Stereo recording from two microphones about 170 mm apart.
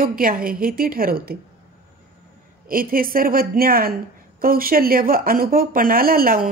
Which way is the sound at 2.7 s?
55° right (ahead or behind).